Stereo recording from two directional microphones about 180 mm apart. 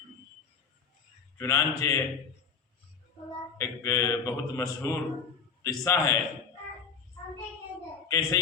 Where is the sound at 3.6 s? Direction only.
15° left (ahead or behind).